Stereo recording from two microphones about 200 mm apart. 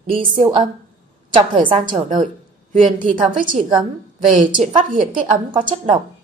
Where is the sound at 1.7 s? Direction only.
25° right (ahead or behind).